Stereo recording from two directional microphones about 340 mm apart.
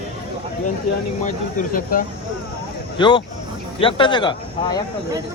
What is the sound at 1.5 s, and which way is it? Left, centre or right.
Speech, left.